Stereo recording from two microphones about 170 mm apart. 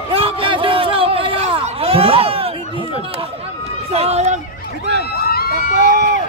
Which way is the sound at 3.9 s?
35° right (ahead or behind).